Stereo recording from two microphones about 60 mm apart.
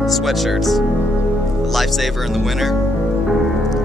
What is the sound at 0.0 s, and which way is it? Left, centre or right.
Speech, centre.